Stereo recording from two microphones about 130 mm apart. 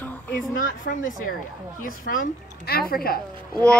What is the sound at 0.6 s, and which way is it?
Speech, 90° left.